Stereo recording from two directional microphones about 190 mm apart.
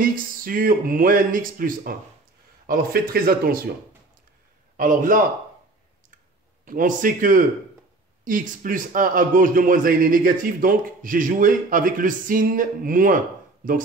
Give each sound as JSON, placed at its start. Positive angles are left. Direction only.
{"t": 0.0, "sound": "a man's voice", "side_deg": -50}
{"t": 4.7, "sound": "a man's voice", "side_deg": -45}
{"t": 6.6, "sound": "a man's voice", "side_deg": -45}